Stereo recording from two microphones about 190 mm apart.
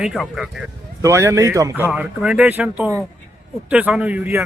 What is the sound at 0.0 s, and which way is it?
Speech, centre (ahead or behind).